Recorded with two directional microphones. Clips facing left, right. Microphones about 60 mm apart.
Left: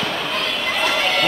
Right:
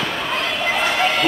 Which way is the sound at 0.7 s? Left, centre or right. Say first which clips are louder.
Right 1 dB; right.